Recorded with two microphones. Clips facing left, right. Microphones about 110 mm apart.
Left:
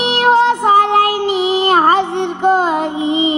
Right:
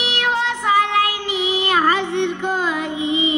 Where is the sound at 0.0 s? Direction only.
40° left (ahead or behind).